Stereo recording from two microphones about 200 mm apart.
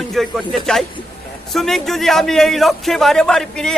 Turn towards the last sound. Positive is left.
turn(degrees=5)  # may be behind; listen again after turning